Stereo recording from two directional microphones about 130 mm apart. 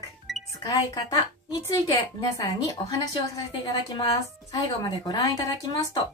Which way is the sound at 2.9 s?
30° left (ahead or behind).